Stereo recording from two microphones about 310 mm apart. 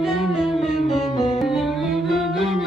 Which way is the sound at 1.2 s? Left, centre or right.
Centre.